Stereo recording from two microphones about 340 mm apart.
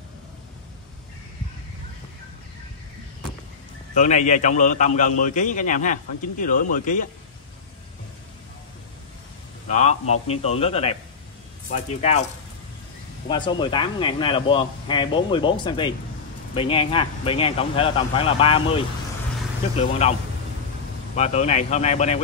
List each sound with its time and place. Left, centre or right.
3.9 s a man's voice: left
9.8 s a man's voice: centre
13.3 s speech: centre
20.0 s a man's voice: centre